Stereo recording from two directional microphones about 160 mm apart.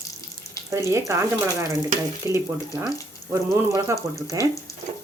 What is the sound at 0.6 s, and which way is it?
Speech, 20° right (ahead or behind).